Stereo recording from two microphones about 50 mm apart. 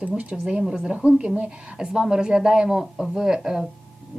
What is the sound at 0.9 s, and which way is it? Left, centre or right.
Speech, right.